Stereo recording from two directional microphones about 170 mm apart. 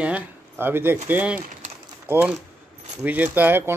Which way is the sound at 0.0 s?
10° right (ahead or behind).